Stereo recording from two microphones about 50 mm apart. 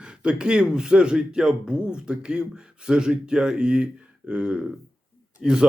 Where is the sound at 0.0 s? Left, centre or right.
Centre.